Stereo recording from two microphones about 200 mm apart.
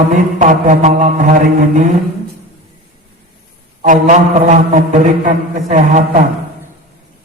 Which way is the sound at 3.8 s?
40° right (ahead or behind).